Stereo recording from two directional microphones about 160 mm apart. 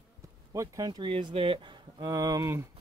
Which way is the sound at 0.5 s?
20° right (ahead or behind).